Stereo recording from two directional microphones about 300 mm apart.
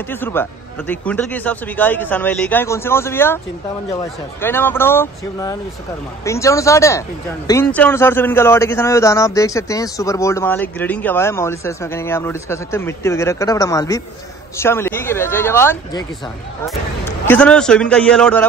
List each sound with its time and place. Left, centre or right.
0.1 s speech: centre
4.4 s speech: centre
17.3 s a man's voice: centre